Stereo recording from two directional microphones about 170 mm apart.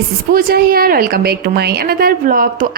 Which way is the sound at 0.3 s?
60° right (ahead or behind).